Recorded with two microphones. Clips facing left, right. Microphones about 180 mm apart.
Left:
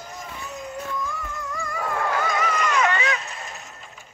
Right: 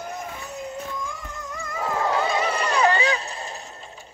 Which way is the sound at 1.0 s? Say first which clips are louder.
Left 3 dB; 15° right (ahead or behind).